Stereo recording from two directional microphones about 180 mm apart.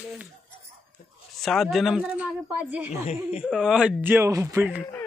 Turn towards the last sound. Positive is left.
turn(degrees=-15)  # may be behind; listen again after turning